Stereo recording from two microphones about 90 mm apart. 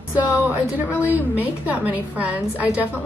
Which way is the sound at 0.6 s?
30° left (ahead or behind).